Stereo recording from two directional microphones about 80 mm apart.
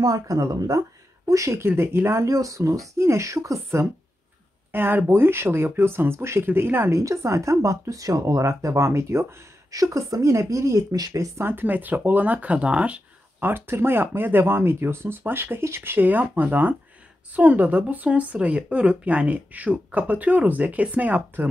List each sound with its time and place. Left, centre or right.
0.0 s speech: right
1.7 s speech: right
4.7 s speech: right
7.0 s speech: right
11.0 s speech: right
11.3 s speech: right
13.5 s speech: right